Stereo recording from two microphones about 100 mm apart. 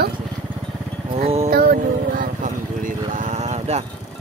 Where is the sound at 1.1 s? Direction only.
90° right.